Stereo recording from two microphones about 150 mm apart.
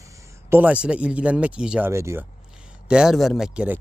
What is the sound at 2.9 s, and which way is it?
Speech, 5° right (ahead or behind).